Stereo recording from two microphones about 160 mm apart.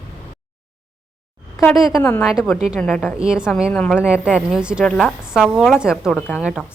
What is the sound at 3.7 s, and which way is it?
Speech, 10° left (ahead or behind).